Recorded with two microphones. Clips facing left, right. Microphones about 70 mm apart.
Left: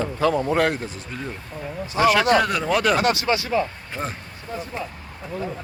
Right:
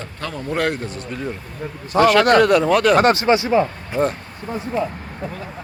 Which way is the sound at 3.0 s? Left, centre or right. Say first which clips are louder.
Right 6 dB; right.